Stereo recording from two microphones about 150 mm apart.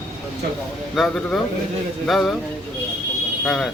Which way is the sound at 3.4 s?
Centre (ahead or behind).